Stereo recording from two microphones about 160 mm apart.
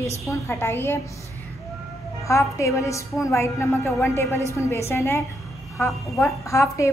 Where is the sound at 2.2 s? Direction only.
20° left (ahead or behind).